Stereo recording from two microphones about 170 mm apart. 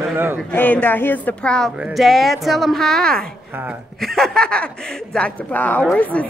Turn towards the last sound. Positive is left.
turn(degrees=10)  # may be behind; listen again after turning